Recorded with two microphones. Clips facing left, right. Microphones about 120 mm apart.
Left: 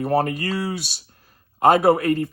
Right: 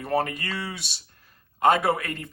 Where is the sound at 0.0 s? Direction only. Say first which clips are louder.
Left 5 dB; 35° left (ahead or behind).